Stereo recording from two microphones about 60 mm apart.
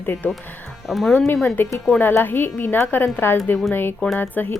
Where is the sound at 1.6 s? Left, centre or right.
Left.